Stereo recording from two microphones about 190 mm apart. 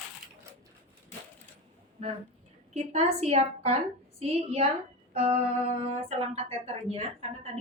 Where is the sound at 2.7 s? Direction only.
35° right (ahead or behind).